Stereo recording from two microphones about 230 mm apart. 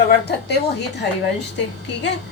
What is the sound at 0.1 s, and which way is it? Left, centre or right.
A woman's voice, left.